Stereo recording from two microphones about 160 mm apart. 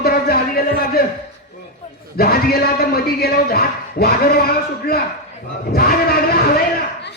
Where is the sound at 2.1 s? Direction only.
70° left (ahead or behind).